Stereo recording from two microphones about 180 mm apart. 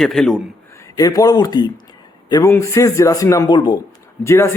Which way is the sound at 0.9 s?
20° left (ahead or behind).